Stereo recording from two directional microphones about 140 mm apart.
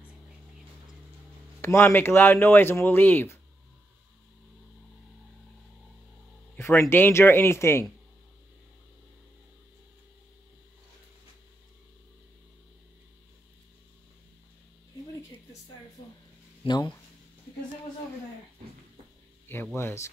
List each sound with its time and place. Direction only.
1.6 s speech: 20° left (ahead or behind)
6.5 s speech: 15° left (ahead or behind)
16.6 s speech: 30° left (ahead or behind)
19.5 s speech: 15° left (ahead or behind)